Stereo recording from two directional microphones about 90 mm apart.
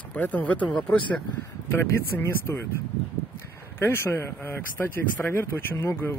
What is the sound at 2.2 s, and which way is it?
Speech, 25° left (ahead or behind).